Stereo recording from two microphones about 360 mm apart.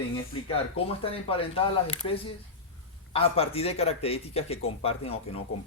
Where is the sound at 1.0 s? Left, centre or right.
Centre.